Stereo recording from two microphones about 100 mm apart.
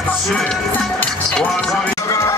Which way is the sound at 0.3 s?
10° left (ahead or behind).